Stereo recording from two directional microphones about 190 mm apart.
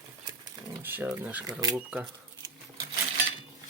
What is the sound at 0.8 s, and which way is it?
Speech, 10° right (ahead or behind).